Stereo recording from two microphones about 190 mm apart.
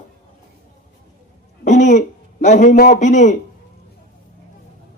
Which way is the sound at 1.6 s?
40° left (ahead or behind).